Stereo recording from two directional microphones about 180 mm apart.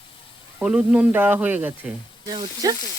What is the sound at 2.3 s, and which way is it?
Frying, 25° right (ahead or behind).